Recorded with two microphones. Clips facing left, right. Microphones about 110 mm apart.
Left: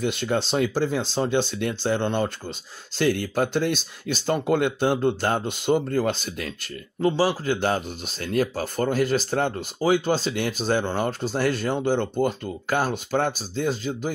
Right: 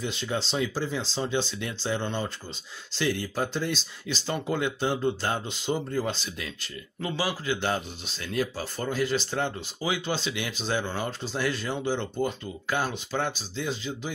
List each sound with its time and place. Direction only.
0.0 s speech: 60° left (ahead or behind)
7.1 s speech: 35° left (ahead or behind)